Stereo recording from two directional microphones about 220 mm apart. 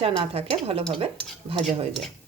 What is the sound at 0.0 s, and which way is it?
Speech, 25° right (ahead or behind).